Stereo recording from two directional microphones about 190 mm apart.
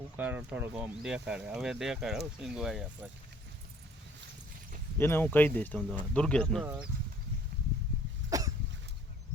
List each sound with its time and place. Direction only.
0.2 s speech: 10° right (ahead or behind)
4.9 s speech: 10° left (ahead or behind)
8.3 s cough: 20° right (ahead or behind)